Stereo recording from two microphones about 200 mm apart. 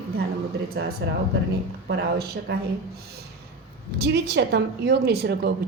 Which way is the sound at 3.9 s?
55° right (ahead or behind).